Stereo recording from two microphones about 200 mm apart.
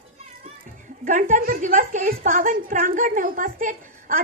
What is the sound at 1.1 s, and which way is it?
A woman's voice, 40° right (ahead or behind).